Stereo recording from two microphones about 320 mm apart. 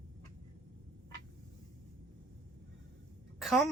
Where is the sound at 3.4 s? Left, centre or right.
Centre.